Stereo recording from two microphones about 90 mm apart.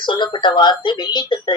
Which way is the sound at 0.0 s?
60° left (ahead or behind).